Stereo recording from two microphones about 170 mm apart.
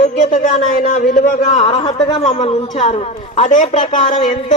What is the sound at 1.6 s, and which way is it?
A man's voice, 30° left (ahead or behind).